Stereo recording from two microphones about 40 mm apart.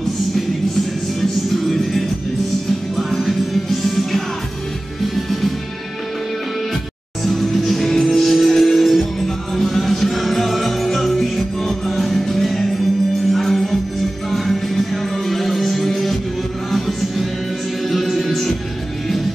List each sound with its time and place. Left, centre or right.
1.5 s music: centre
3.1 s music: centre
7.2 s music: centre